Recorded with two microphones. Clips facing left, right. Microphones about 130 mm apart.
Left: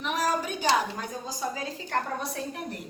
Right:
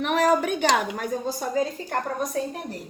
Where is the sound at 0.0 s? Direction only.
65° right (ahead or behind).